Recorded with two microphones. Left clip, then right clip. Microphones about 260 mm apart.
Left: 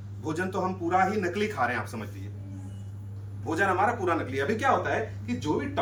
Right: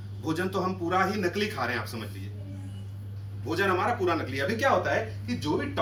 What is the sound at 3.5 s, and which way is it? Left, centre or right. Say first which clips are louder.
Speech: left 1 dB; centre.